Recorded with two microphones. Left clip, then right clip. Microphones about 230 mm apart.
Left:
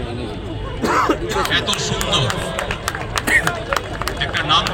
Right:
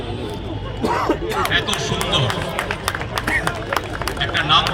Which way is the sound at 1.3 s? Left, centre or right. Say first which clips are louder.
Left 1 dB; left.